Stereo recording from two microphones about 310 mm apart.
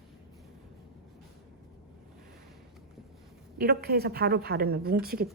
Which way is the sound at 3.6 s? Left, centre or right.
Right.